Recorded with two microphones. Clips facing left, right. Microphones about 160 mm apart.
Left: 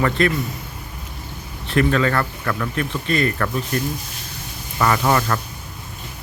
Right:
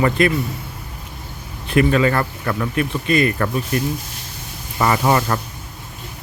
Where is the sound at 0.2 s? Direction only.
15° right (ahead or behind).